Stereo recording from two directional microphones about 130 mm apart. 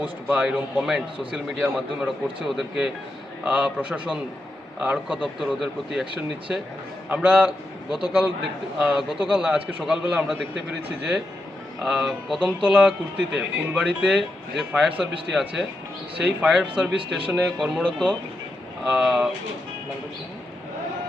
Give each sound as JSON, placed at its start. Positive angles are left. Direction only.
{"t": 0.0, "sound": "a man's voice", "side_deg": -10}
{"t": 5.2, "sound": "a man's voice", "side_deg": 0}
{"t": 7.1, "sound": "a man's voice", "side_deg": -10}
{"t": 17.8, "sound": "speech", "side_deg": 10}
{"t": 18.9, "sound": "a man's voice", "side_deg": -5}